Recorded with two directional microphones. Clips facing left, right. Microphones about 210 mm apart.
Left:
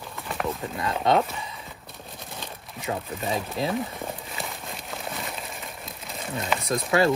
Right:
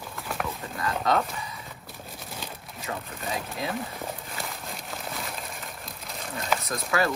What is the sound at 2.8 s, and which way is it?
Speech, 25° left (ahead or behind).